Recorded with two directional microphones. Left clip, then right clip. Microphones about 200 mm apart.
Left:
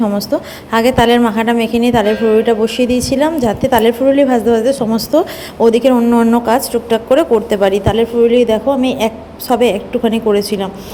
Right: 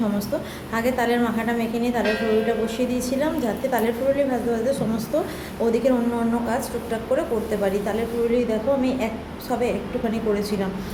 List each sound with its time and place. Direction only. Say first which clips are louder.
0.7 s a woman's voice: left 12 dB; 45° left (ahead or behind)